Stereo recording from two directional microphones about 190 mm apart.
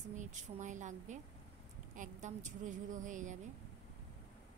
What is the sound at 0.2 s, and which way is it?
A woman's voice, 40° right (ahead or behind).